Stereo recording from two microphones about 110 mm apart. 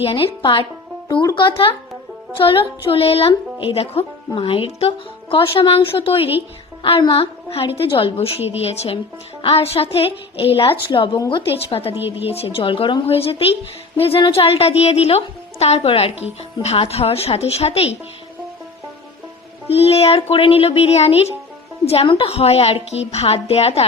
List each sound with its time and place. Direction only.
0.0 s speech: 55° left (ahead or behind)
0.4 s speech: 45° left (ahead or behind)
1.5 s a woman's voice: 55° left (ahead or behind)
11.9 s a woman's voice: 20° right (ahead or behind)
12.5 s speech: 55° left (ahead or behind)
19.7 s speech: 65° left (ahead or behind)
22.0 s speech: 55° left (ahead or behind)